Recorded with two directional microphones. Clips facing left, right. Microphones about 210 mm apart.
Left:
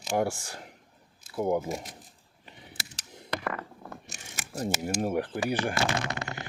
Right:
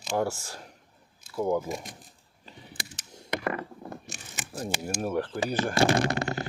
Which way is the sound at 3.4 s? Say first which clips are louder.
Right 5 dB; 20° right (ahead or behind).